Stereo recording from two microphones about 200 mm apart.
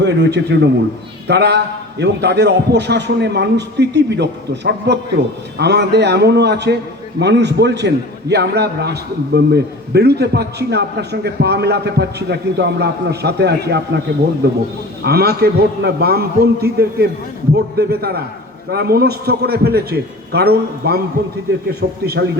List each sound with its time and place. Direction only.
0.0 s a man's voice: 60° right (ahead or behind)
15.0 s a man's voice: 50° right (ahead or behind)